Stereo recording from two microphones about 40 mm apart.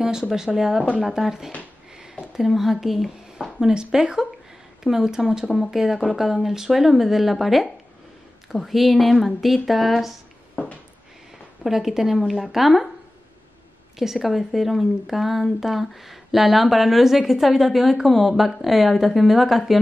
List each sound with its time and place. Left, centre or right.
0.0 s speech: centre
3.5 s a woman's voice: centre
10.5 s a sound: left
11.6 s a woman's voice: centre
13.9 s a woman's voice: centre